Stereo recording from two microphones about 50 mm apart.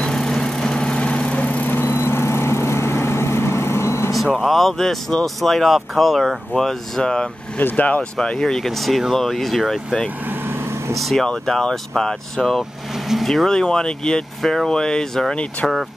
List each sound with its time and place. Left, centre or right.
0.1 s vehicle: centre; by 1.7 s left
1.7 s vehicle: left
4.4 s speech: centre
7.0 s speech: centre
7.5 s speech: left
8.2 s speech: centre
11.0 s speech: centre
11.2 s speech: centre